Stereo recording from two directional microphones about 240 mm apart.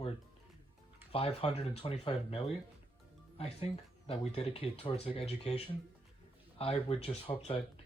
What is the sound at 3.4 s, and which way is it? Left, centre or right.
Speech, left.